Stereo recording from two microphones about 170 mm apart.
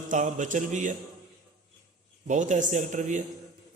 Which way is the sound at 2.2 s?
45° right (ahead or behind).